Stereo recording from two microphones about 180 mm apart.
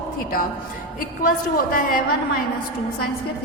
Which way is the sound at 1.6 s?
50° left (ahead or behind).